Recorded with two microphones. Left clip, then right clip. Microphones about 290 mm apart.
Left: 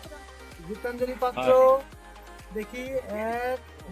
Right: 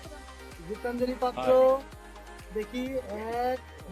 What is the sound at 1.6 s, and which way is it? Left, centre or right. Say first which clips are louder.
Music: left 4 dB; centre.